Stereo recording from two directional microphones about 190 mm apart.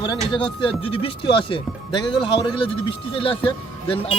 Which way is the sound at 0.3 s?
25° left (ahead or behind).